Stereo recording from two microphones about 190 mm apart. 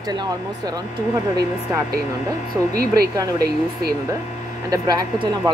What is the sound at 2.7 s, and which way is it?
Speech, 55° right (ahead or behind).